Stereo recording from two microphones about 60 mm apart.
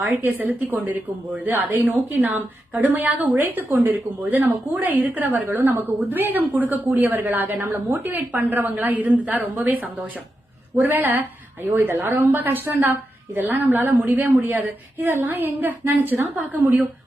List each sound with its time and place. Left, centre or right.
0.0 s a woman's voice: right
8.4 s a woman's voice: right